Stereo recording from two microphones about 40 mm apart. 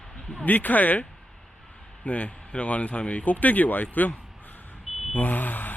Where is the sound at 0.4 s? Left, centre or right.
Left.